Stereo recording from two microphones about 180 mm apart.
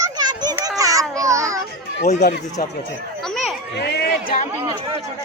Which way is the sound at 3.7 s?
65° left (ahead or behind).